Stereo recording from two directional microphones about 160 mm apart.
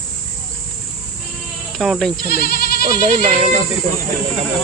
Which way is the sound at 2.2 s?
70° left (ahead or behind).